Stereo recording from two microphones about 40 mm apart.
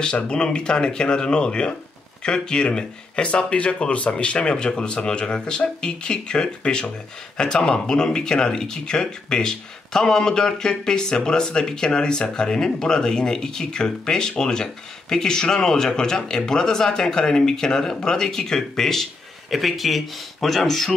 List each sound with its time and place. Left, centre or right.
0.0 s speech: left
19.5 s speech: centre